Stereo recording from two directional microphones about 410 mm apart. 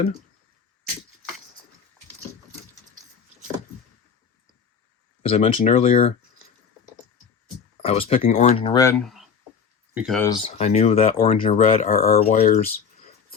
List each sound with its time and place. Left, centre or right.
5.2 s speech: centre
7.8 s speech: centre